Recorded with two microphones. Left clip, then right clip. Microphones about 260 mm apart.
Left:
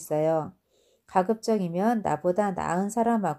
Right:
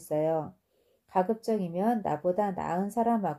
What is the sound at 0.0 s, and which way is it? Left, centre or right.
Speech, left.